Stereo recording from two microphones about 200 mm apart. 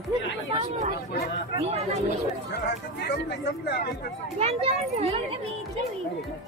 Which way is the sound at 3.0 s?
55° left (ahead or behind).